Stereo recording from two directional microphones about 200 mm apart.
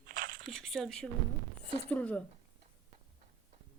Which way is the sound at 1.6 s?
30° right (ahead or behind).